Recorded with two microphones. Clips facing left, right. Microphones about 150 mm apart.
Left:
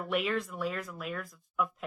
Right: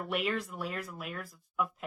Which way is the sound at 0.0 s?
Centre (ahead or behind).